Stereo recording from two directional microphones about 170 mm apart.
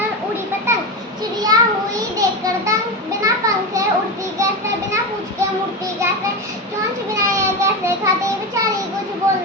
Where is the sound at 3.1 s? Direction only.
20° right (ahead or behind).